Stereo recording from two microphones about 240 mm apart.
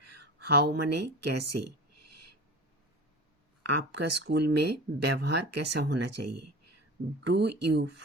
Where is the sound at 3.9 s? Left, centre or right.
Right.